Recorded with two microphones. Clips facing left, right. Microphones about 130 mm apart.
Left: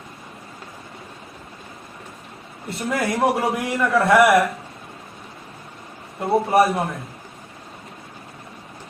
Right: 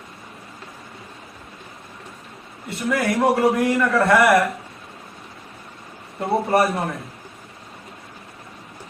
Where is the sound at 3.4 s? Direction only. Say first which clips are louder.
Right 4 dB; centre (ahead or behind).